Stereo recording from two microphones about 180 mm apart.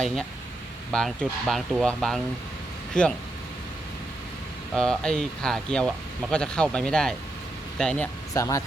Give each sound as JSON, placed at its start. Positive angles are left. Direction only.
{"t": 0.9, "sound": "speech", "side_deg": 5}
{"t": 4.7, "sound": "speech", "side_deg": 5}
{"t": 8.3, "sound": "speech", "side_deg": 20}